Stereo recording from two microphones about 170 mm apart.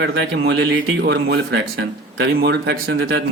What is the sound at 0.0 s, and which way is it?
A man's voice, 90° right.